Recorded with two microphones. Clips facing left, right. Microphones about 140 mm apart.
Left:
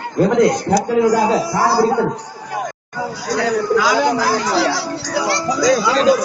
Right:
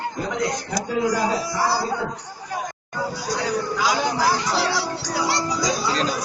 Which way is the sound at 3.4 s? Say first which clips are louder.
Left 8 dB; 90° left.